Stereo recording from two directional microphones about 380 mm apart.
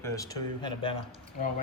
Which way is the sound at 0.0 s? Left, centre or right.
Centre.